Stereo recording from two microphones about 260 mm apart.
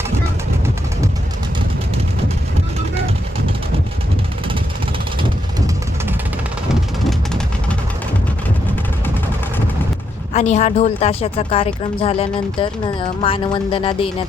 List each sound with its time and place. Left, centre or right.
7.0 s vehicle: centre
10.3 s a woman's voice: left